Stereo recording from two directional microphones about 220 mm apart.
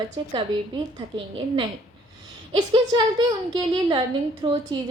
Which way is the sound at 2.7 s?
20° right (ahead or behind).